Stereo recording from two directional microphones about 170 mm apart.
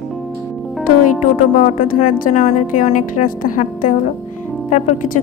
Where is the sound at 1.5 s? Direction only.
50° left (ahead or behind).